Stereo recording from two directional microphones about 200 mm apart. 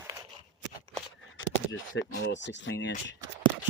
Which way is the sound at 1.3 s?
75° left (ahead or behind).